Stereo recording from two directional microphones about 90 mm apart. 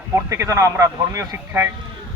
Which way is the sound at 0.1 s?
35° right (ahead or behind).